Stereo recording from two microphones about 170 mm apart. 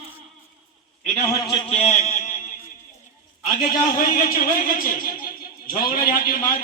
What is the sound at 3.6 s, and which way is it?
A man's voice, 55° left (ahead or behind).